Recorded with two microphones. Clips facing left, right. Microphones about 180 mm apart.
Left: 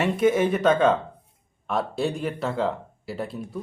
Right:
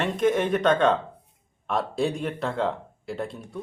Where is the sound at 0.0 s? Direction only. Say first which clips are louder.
Left 2 dB; 5° left (ahead or behind).